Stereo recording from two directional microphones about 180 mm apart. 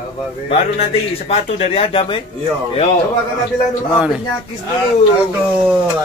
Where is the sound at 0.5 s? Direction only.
35° left (ahead or behind).